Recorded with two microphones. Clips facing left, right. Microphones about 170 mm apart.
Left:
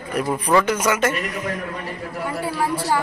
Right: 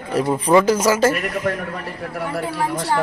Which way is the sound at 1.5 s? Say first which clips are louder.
Right 7 dB; 60° right (ahead or behind).